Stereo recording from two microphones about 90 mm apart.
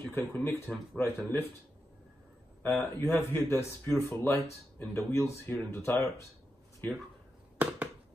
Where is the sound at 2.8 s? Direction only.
25° left (ahead or behind).